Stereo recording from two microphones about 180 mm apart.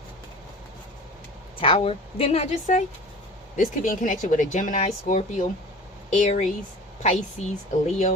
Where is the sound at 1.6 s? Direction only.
30° left (ahead or behind).